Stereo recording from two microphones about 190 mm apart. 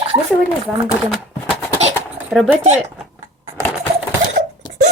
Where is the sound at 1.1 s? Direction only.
5° left (ahead or behind).